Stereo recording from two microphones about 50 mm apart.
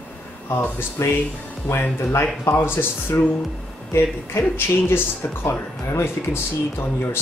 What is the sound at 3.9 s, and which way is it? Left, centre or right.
Speech, left.